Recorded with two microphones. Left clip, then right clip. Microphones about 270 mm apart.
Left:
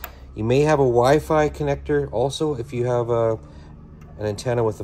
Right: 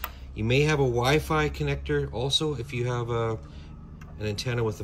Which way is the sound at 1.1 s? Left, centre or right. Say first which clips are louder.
Left 7 dB; centre.